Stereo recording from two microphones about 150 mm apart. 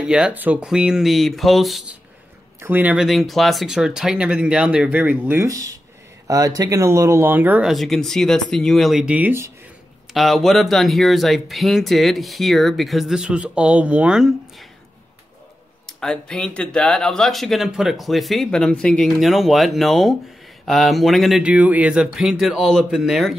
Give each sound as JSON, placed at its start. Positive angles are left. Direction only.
{"t": 0.0, "sound": "speech", "side_deg": -5}
{"t": 2.6, "sound": "speech", "side_deg": -10}
{"t": 3.1, "sound": "speech", "side_deg": 0}
{"t": 7.7, "sound": "speech", "side_deg": 0}
{"t": 10.1, "sound": "speech", "side_deg": 0}
{"t": 15.9, "sound": "speech", "side_deg": 5}